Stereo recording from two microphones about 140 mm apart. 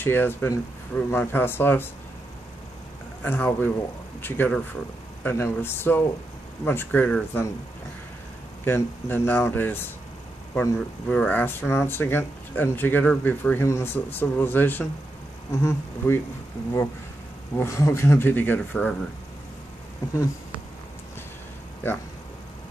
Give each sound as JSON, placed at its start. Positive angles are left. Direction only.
{"t": 0.0, "sound": "speech", "side_deg": 15}
{"t": 3.2, "sound": "speech", "side_deg": 15}
{"t": 8.6, "sound": "speech", "side_deg": 15}
{"t": 11.1, "sound": "speech", "side_deg": 10}
{"t": 17.6, "sound": "speech", "side_deg": 20}
{"t": 21.8, "sound": "speech", "side_deg": 15}